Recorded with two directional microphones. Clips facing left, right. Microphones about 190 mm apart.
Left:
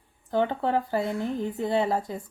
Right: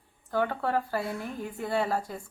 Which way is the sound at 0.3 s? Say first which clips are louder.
Left 3 dB; 20° left (ahead or behind).